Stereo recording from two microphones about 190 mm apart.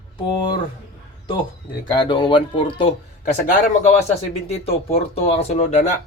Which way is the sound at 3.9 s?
35° left (ahead or behind).